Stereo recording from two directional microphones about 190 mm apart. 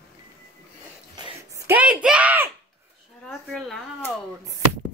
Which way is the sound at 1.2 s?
15° right (ahead or behind).